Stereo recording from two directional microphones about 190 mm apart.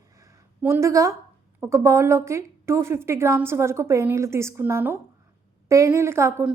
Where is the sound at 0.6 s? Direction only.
15° right (ahead or behind).